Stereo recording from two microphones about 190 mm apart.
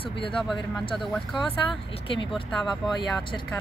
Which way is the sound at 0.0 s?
30° left (ahead or behind).